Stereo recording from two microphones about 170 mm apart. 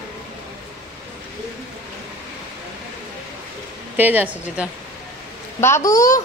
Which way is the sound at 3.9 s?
10° right (ahead or behind).